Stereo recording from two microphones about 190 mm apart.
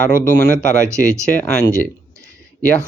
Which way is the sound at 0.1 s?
45° left (ahead or behind).